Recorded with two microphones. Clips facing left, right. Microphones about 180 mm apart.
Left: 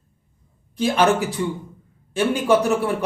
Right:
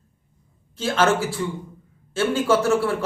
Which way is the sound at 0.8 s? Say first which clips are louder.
Left 2 dB; 15° left (ahead or behind).